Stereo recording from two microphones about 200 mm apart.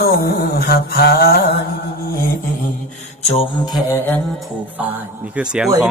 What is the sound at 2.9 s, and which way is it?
Mantra, 30° left (ahead or behind).